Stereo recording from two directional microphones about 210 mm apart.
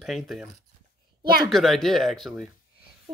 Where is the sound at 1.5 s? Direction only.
Centre (ahead or behind).